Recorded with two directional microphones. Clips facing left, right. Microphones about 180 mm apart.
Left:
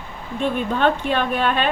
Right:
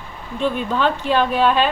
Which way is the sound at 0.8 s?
55° left (ahead or behind).